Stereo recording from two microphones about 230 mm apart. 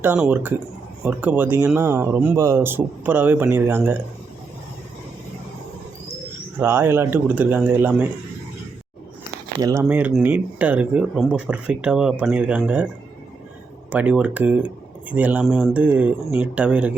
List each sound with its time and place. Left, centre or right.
0.0 s speech: centre
6.6 s speech: centre
9.6 s speech: centre
9.8 s speech: centre
13.9 s speech: centre